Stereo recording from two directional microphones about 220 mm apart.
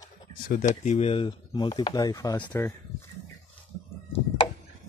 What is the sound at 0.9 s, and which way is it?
Speech, 30° left (ahead or behind).